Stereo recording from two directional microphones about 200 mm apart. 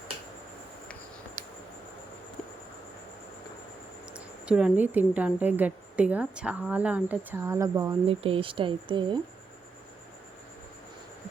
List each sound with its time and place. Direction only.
4.1 s speech: 5° right (ahead or behind)
8.0 s speech: 25° right (ahead or behind)